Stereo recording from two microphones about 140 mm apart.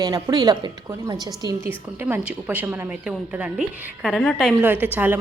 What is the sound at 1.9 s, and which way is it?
A woman's voice, 15° right (ahead or behind).